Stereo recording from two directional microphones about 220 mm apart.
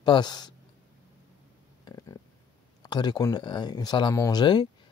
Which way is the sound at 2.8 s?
20° left (ahead or behind).